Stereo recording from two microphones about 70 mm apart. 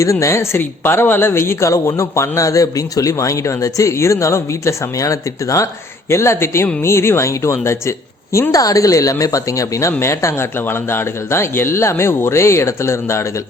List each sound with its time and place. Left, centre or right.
0.0 s a woman's voice: left
6.1 s a woman's voice: left